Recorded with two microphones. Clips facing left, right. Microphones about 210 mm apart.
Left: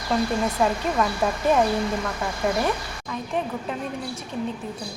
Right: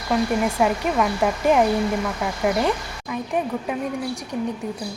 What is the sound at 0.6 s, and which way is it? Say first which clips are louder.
A woman's voice: right 1 dB; 10° right (ahead or behind).